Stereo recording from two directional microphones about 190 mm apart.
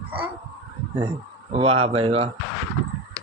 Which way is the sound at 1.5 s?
30° right (ahead or behind).